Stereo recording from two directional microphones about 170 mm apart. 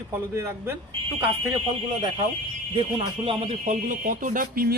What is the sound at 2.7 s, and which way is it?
Speech, 30° right (ahead or behind).